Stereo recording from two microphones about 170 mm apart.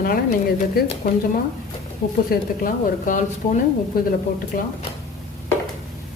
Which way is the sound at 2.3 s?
55° left (ahead or behind).